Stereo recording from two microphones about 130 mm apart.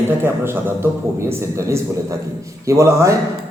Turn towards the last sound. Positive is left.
turn(degrees=-20)  # may be behind; listen again after turning